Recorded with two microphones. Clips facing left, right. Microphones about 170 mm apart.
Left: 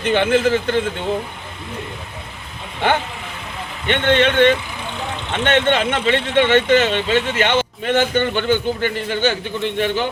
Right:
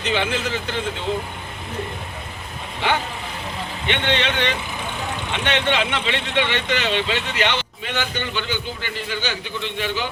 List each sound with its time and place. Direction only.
0.0 s speech: 55° left (ahead or behind)
2.8 s speech: 50° left (ahead or behind)